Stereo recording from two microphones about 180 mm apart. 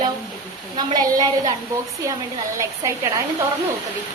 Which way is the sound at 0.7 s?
25° right (ahead or behind).